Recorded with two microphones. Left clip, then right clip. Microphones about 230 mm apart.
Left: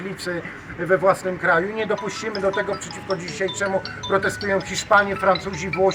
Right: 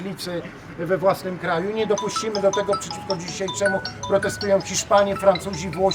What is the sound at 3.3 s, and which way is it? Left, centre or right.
Speech, centre.